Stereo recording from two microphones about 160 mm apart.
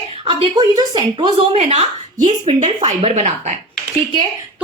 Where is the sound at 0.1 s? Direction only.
35° right (ahead or behind).